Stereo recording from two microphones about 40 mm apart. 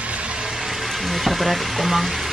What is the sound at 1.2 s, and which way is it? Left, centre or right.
Speech, centre.